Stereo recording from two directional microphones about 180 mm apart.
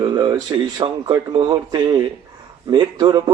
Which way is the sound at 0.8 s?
30° right (ahead or behind).